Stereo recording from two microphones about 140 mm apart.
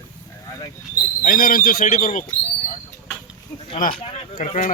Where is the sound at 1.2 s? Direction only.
90° left; by 2.2 s 70° left (ahead or behind).